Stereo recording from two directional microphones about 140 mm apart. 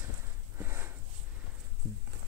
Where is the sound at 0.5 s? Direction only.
15° right (ahead or behind).